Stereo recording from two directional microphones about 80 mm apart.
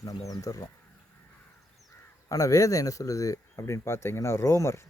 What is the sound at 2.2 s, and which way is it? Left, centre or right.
Speech, left.